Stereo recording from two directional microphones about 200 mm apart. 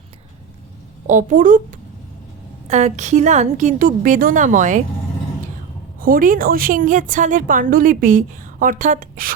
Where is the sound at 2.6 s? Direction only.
35° right (ahead or behind).